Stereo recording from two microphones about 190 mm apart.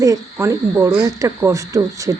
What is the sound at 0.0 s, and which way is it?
Speech, 15° right (ahead or behind).